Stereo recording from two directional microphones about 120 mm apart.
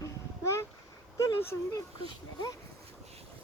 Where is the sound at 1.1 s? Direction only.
25° left (ahead or behind).